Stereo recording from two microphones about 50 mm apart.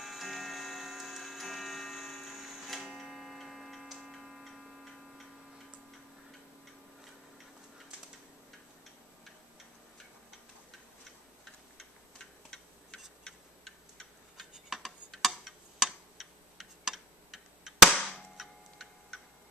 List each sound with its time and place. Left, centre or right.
0.0 s tick-tock: centre
11.8 s tick-tock: centre
14.3 s tick: centre
17.9 s cap gun: centre